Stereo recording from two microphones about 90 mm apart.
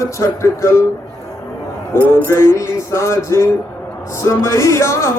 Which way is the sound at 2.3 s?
30° left (ahead or behind).